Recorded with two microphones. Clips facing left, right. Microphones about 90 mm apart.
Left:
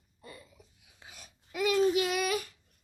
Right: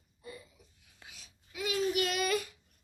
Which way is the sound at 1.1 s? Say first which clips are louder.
Left 7 dB; 50° left (ahead or behind).